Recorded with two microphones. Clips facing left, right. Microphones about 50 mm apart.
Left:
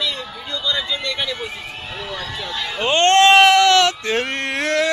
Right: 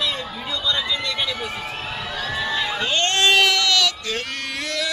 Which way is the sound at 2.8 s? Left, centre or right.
Left.